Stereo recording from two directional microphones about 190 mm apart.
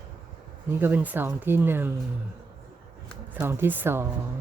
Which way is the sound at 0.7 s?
10° right (ahead or behind).